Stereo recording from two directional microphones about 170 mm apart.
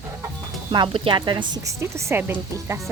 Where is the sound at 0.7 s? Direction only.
30° right (ahead or behind); by 2.8 s 15° right (ahead or behind).